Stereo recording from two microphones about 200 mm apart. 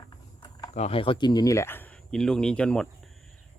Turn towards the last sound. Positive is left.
turn(degrees=0)  # may be behind; listen again after turning